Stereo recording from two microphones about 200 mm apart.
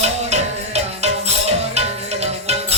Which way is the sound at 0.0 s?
35° right (ahead or behind).